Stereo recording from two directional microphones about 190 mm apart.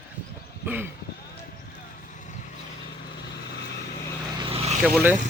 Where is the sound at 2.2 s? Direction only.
40° left (ahead or behind).